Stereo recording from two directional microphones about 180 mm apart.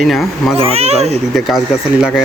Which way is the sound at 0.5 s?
35° right (ahead or behind).